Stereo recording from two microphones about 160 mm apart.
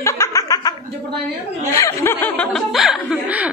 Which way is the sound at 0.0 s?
20° left (ahead or behind).